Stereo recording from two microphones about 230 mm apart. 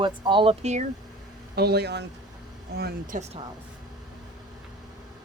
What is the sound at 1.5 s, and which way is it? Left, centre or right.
Speech, right.